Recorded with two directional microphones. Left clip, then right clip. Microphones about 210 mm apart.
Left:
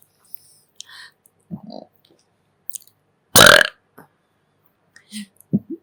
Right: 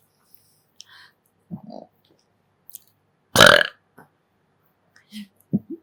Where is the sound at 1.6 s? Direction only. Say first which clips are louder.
Left 2 dB; 15° left (ahead or behind).